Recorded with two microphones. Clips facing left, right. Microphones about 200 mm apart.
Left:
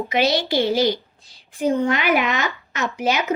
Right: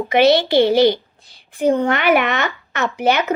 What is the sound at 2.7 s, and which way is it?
Speech, 60° right (ahead or behind).